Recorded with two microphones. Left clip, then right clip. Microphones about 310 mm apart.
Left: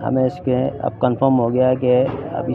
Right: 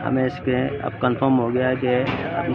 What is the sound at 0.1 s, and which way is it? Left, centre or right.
A man's voice, centre.